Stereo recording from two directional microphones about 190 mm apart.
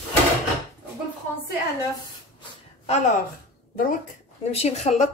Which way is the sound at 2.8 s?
35° left (ahead or behind).